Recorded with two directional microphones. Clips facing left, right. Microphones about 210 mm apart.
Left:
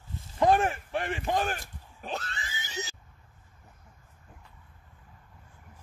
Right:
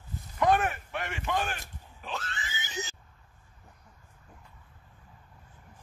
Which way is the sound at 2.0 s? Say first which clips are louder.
Left 2 dB; 35° left (ahead or behind).